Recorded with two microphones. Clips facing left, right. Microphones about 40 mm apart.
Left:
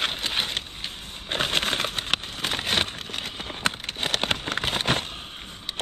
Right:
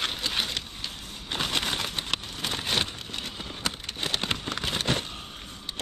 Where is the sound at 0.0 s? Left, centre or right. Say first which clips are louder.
Left 2 dB; left.